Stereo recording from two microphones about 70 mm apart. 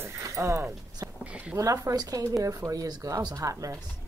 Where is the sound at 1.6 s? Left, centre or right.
Right.